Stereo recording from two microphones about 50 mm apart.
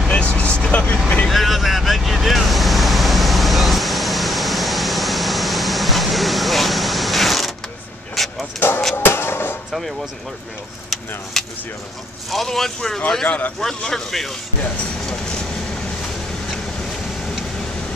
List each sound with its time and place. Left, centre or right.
0.1 s vehicle: left
1.3 s vehicle: centre
8.5 s a sound: left
8.9 s music: left
9.7 s speech: centre
11.4 s speech: centre
15.0 s train: centre